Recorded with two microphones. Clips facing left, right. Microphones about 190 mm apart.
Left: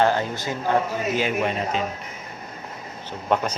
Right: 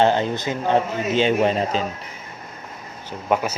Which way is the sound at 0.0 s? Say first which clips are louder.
Right 3 dB; 20° right (ahead or behind).